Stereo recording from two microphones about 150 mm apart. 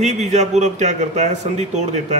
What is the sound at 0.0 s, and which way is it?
A man's voice, 50° right (ahead or behind).